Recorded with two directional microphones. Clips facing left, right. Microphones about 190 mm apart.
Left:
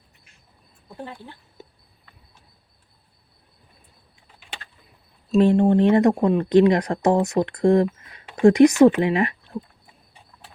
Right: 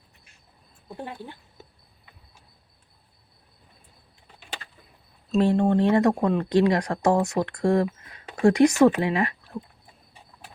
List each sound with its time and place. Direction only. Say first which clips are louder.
0.9 s speech: right 1 dB; 15° right (ahead or behind)
5.4 s speech: left 4 dB; 20° left (ahead or behind)